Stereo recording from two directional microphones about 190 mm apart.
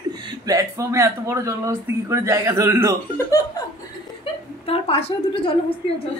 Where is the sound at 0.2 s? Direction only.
20° right (ahead or behind).